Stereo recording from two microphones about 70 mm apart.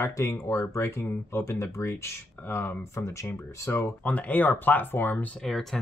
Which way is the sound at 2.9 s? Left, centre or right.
Left.